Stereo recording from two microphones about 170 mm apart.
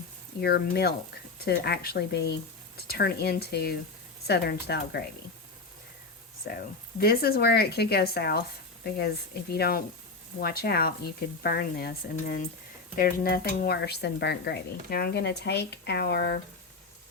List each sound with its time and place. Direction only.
0.4 s speech: 70° left (ahead or behind)
6.5 s speech: 70° left (ahead or behind)